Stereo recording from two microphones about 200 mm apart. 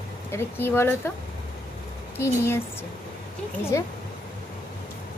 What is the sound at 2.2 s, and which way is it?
Speech, 15° left (ahead or behind).